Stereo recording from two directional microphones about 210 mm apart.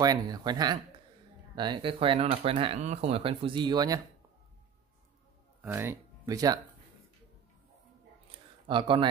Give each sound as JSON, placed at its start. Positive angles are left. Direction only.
{"t": 0.0, "sound": "speech", "side_deg": -20}
{"t": 5.6, "sound": "speech", "side_deg": -10}
{"t": 8.6, "sound": "speech", "side_deg": -25}